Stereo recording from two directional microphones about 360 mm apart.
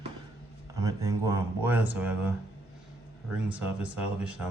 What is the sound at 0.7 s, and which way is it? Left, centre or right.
Speech, centre.